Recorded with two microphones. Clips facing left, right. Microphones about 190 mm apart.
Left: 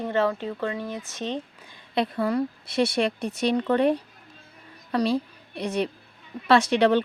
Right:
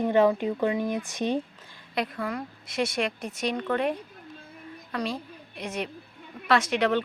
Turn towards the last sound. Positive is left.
turn(degrees=30)  # may be behind; listen again after turning